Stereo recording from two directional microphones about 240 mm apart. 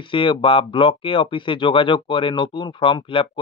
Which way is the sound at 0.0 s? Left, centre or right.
Left.